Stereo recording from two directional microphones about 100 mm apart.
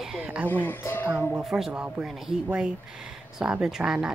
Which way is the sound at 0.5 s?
20° left (ahead or behind).